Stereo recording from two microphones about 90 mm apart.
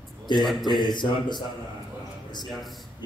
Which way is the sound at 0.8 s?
55° left (ahead or behind).